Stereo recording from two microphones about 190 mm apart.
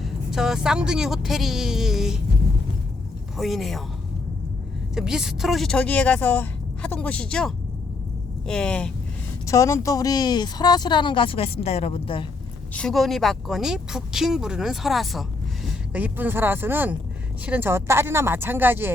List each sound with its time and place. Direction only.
0.0 s speech: centre (ahead or behind)
3.3 s speech: centre (ahead or behind)
4.9 s speech: 5° right (ahead or behind)
9.5 s speech: 15° left (ahead or behind)
12.7 s speech: centre (ahead or behind)